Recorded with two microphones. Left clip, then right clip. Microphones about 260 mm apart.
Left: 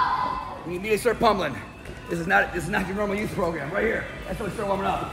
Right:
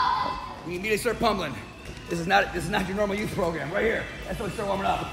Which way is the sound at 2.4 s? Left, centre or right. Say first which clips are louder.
Left 1 dB; right.